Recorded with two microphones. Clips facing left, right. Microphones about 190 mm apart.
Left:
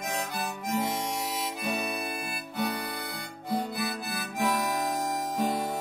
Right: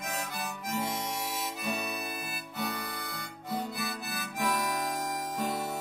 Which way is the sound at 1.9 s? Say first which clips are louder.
Left 4 dB; 25° left (ahead or behind).